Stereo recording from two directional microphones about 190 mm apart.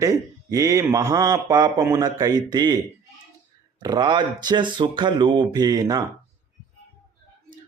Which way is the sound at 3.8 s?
20° right (ahead or behind).